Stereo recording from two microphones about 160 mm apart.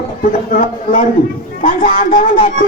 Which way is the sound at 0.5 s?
55° left (ahead or behind).